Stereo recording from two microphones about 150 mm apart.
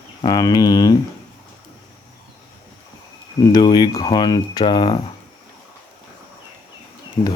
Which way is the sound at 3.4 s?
30° left (ahead or behind).